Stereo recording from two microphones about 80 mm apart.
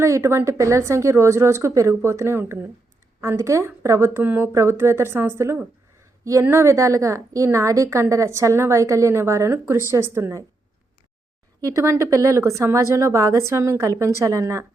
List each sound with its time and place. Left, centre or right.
0.0 s a woman's voice: right
11.6 s a woman's voice: right